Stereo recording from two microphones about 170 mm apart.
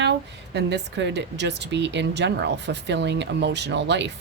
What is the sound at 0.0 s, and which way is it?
Speech, 90° right.